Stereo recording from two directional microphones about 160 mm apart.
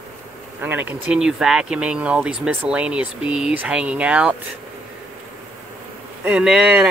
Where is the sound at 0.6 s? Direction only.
10° right (ahead or behind).